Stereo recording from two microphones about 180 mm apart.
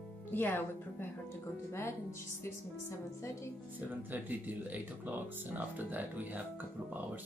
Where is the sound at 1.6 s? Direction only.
15° left (ahead or behind).